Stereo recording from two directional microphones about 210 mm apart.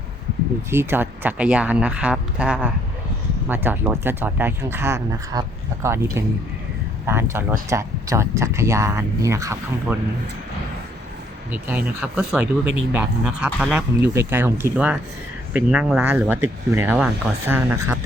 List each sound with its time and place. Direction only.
0.7 s speech: 10° right (ahead or behind)
12.1 s speech: 5° right (ahead or behind)